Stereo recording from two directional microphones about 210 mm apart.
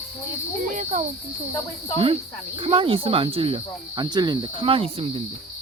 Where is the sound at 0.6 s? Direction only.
35° right (ahead or behind).